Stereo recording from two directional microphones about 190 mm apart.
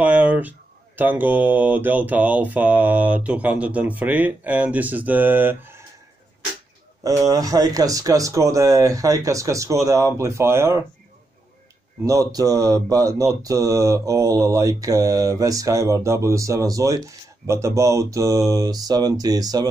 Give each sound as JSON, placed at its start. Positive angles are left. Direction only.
{"t": 0.0, "sound": "speech", "side_deg": -5}
{"t": 7.0, "sound": "speech", "side_deg": -20}
{"t": 12.0, "sound": "speech", "side_deg": -20}
{"t": 17.5, "sound": "mantra", "side_deg": -15}